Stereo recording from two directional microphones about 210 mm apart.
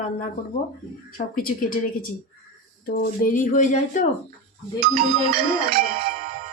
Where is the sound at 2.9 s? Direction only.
40° left (ahead or behind).